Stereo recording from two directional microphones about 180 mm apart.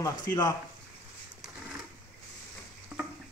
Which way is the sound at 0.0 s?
20° left (ahead or behind).